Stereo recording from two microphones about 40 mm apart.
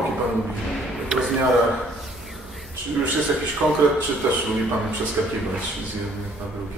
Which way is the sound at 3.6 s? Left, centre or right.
Centre.